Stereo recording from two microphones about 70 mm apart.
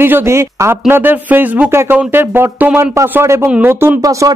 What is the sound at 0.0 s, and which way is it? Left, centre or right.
Speech, right.